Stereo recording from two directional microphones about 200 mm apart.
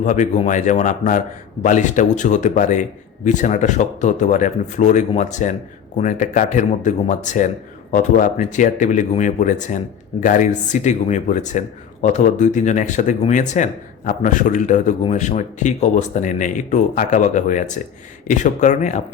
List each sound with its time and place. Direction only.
0.0 s speech: 40° left (ahead or behind)